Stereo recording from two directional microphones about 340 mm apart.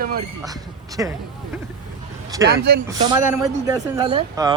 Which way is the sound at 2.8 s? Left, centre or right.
Centre.